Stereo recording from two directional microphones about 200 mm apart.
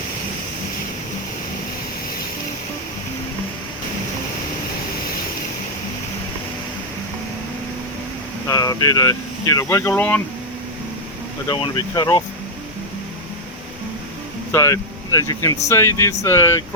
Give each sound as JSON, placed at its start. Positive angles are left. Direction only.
{"t": 8.4, "sound": "speech", "side_deg": 15}
{"t": 11.4, "sound": "speech", "side_deg": 20}
{"t": 14.5, "sound": "speech", "side_deg": 15}